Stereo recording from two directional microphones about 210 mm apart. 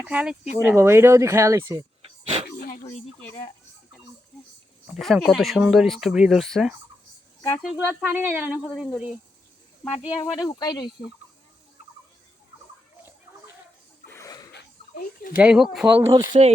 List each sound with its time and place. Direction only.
0.0 s speech: 5° right (ahead or behind)
2.5 s dog: 45° left (ahead or behind)
2.8 s speech: 15° left (ahead or behind)
4.9 s speech: centre (ahead or behind)
10.3 s speech: 20° left (ahead or behind)
14.1 s a sound: 15° left (ahead or behind)
14.5 s a sound: 50° left (ahead or behind)
15.4 s speech: 5° right (ahead or behind)